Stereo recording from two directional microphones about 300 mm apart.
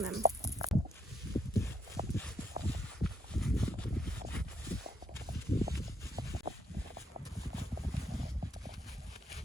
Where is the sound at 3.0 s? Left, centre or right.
Centre.